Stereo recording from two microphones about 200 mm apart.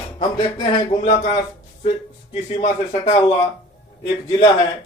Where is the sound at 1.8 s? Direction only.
35° left (ahead or behind).